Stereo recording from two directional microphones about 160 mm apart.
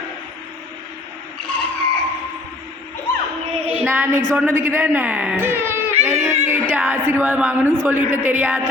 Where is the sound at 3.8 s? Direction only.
15° right (ahead or behind).